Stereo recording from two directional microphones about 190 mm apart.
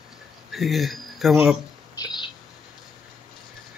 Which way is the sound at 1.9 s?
20° left (ahead or behind).